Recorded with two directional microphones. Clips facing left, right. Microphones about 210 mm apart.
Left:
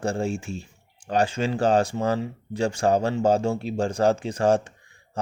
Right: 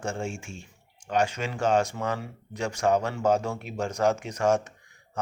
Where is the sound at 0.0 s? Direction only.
35° left (ahead or behind).